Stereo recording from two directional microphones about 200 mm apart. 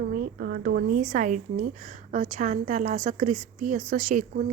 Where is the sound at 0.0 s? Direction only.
50° right (ahead or behind).